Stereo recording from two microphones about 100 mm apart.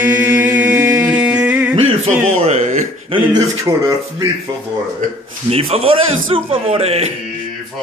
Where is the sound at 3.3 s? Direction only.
35° right (ahead or behind).